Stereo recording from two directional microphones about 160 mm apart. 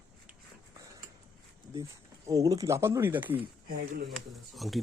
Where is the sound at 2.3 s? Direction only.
20° right (ahead or behind).